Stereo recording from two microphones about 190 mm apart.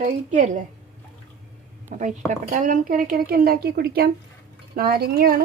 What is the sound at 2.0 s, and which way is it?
Speech, 40° right (ahead or behind).